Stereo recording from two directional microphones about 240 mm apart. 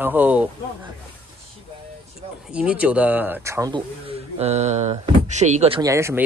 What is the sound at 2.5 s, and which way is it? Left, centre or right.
Speech, centre.